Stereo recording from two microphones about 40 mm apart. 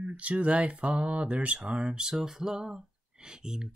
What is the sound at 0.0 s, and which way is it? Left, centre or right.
Speech, right.